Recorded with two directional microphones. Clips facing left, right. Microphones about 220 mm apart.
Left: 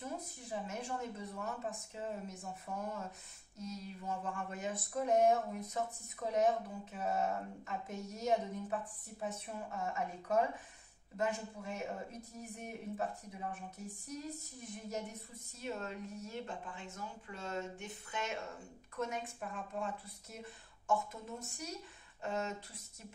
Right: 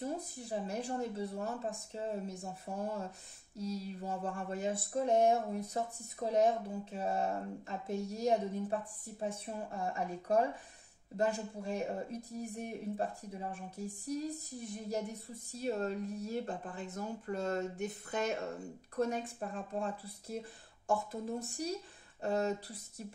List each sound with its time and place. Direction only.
0.0 s speech: 35° right (ahead or behind)